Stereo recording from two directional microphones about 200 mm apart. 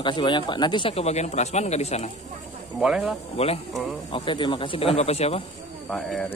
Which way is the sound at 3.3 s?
30° left (ahead or behind).